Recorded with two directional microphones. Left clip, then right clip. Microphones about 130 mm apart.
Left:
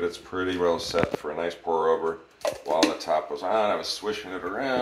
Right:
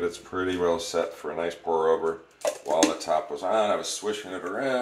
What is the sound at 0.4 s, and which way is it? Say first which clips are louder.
Speech: even; 30° right (ahead or behind).